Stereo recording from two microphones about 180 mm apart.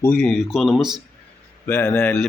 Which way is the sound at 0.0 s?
5° left (ahead or behind).